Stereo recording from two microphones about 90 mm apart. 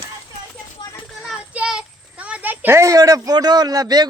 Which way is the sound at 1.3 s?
10° right (ahead or behind).